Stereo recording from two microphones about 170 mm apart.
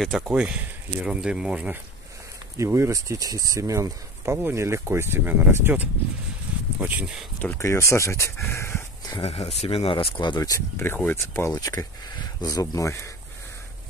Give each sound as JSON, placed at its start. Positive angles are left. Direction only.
{"t": 0.0, "sound": "speech", "side_deg": -5}
{"t": 2.5, "sound": "speech", "side_deg": -15}
{"t": 6.5, "sound": "a sound", "side_deg": -10}
{"t": 6.8, "sound": "speech", "side_deg": -10}
{"t": 7.4, "sound": "speech", "side_deg": 15}
{"t": 9.2, "sound": "speech", "side_deg": 35}